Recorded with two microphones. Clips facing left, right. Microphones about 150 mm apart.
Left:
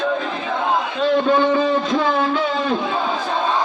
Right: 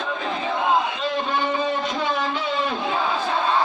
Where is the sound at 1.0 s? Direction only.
60° left (ahead or behind).